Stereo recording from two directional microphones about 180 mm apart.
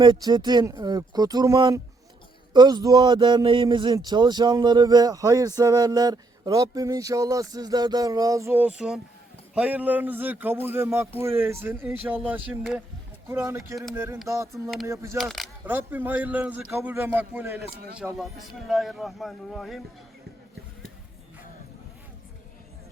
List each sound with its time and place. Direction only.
0.0 s a man's voice: 25° right (ahead or behind)
14.5 s a man's voice: centre (ahead or behind)
14.8 s a man's voice: 15° right (ahead or behind)
15.2 s a man's voice: centre (ahead or behind)
15.6 s a man's voice: 10° right (ahead or behind)
17.6 s speech: 60° right (ahead or behind)
18.7 s a man's voice: centre (ahead or behind)